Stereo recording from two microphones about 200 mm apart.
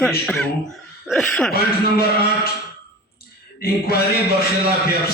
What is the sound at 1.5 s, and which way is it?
Mantra, 50° left (ahead or behind).